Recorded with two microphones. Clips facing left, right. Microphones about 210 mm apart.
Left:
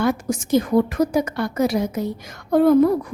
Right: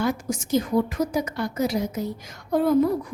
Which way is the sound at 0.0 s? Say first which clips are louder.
Left 4 dB; 65° left (ahead or behind).